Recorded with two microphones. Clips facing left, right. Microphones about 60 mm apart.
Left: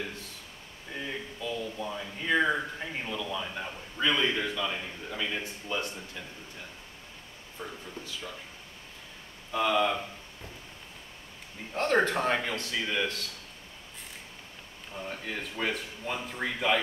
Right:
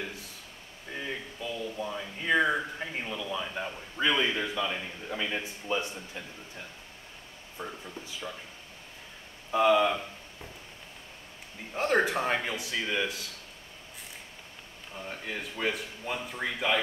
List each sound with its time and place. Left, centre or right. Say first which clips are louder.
0.9 s a sound: even; centre
7.6 s speech: right 2 dB; right
9.5 s a man's voice: right 3 dB; centre
11.7 s a man's voice: even; centre
15.0 s a man's voice: even; centre